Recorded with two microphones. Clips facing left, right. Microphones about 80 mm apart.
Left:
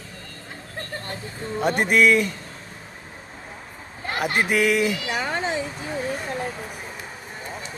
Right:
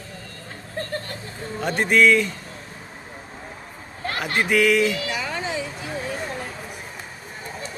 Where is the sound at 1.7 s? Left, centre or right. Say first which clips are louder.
Right 2 dB; centre.